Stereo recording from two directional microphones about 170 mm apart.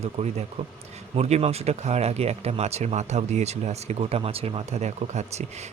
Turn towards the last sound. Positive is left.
turn(degrees=-40)  # may be behind; listen again after turning